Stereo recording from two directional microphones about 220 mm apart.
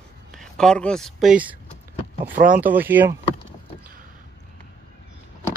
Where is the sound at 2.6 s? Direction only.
10° right (ahead or behind).